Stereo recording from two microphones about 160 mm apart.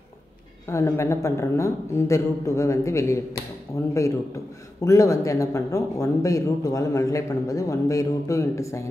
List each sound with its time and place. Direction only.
0.7 s speech: 20° left (ahead or behind)
4.8 s speech: 20° left (ahead or behind)